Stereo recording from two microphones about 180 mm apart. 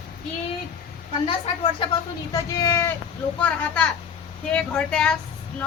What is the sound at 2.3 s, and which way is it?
Speech, 15° left (ahead or behind).